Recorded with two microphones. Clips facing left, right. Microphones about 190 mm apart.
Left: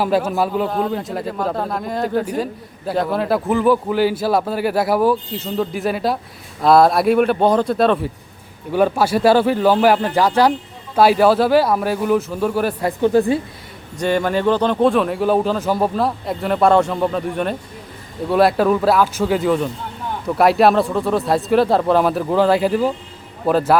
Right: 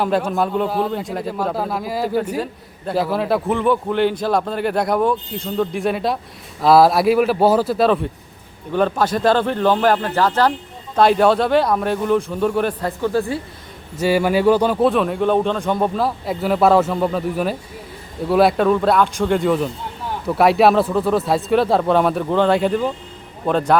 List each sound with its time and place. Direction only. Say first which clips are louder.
0.0 s a man's voice: left 1 dB; 5° left (ahead or behind)
8.7 s a man's voice: left 2 dB; 10° left (ahead or behind)
13.0 s a woman's voice: left 6 dB; 20° left (ahead or behind)
14.0 s a man's voice: right 2 dB; 10° right (ahead or behind)